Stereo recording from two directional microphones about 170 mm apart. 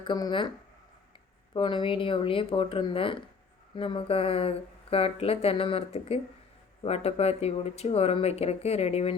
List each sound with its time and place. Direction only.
0.0 s speech: 25° left (ahead or behind)
1.5 s speech: 30° left (ahead or behind)